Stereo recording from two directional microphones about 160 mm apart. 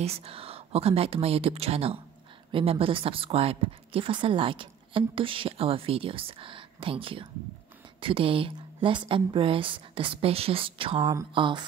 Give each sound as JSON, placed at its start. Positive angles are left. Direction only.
{"t": 0.0, "sound": "a woman's voice", "side_deg": -40}